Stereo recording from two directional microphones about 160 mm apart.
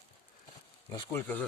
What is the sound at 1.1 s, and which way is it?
Speech, 10° left (ahead or behind).